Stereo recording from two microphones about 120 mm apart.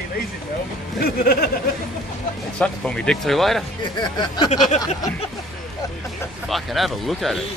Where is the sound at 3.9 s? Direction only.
35° left (ahead or behind).